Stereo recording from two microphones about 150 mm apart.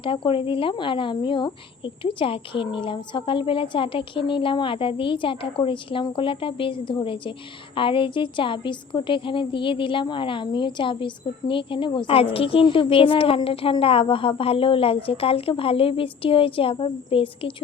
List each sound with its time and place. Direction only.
0.0 s a woman's voice: 35° left (ahead or behind)